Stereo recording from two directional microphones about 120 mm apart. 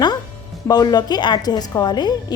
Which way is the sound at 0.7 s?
35° left (ahead or behind).